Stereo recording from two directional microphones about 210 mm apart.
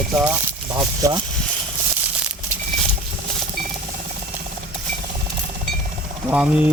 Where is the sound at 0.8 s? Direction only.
15° right (ahead or behind).